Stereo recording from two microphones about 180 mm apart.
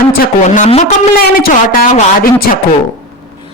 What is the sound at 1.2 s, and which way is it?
Speech, 55° left (ahead or behind).